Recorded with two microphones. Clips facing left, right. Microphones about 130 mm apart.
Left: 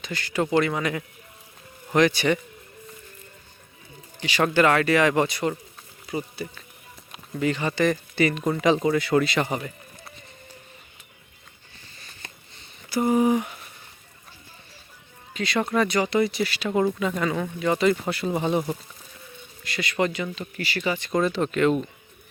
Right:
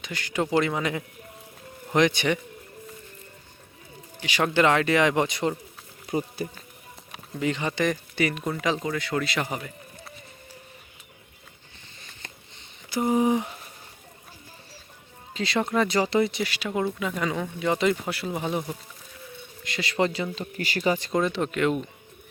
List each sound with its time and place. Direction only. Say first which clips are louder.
0.0 s speech: left 2 dB; 15° right (ahead or behind)
4.2 s speech: left 2 dB; 10° right (ahead or behind)
6.1 s speech: right 2 dB; 45° right (ahead or behind)
7.3 s speech: left 2 dB; 15° right (ahead or behind); by 10.1 s centre (ahead or behind)
12.5 s a sound: left 3 dB; 20° right (ahead or behind)
15.3 s speech: left 1 dB; 25° right (ahead or behind)
16.6 s speech: left 5 dB; 5° right (ahead or behind)
18.1 s speech: left 4 dB; 5° right (ahead or behind)
19.6 s speech: even; 25° right (ahead or behind)
20.3 s speech: even; 40° right (ahead or behind)
21.3 s speech: left 3 dB; 10° right (ahead or behind)